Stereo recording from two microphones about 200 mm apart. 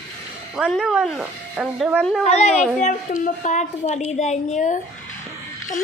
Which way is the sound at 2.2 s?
35° left (ahead or behind).